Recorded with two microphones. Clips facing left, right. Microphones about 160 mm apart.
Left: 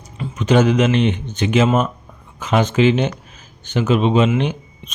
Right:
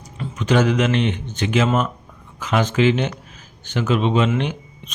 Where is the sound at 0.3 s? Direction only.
20° left (ahead or behind).